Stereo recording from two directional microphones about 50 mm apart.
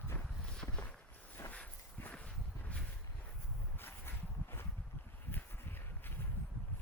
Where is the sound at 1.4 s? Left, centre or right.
Left.